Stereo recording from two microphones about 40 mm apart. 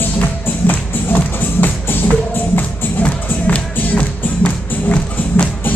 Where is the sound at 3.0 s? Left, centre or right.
Left.